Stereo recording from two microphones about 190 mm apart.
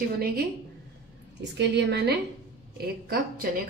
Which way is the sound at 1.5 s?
65° right (ahead or behind).